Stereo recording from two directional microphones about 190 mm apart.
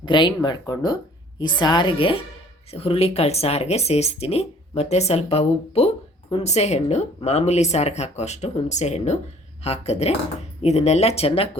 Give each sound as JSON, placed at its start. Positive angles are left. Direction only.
{"t": 0.0, "sound": "speech", "side_deg": 25}